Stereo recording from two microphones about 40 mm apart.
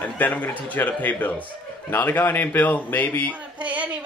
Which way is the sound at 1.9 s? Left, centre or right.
Left.